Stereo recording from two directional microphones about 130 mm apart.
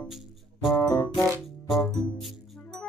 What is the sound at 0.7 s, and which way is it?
Music, 30° left (ahead or behind).